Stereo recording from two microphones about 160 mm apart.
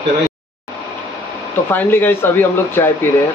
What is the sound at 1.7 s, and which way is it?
Speech, 10° left (ahead or behind).